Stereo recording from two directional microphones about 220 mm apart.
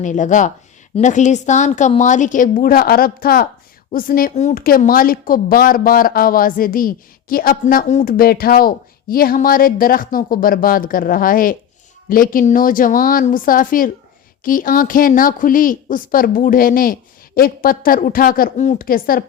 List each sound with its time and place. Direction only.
0.0 s a woman's voice: 35° left (ahead or behind)